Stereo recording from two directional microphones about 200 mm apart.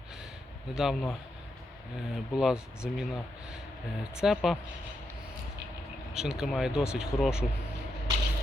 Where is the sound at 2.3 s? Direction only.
5° right (ahead or behind).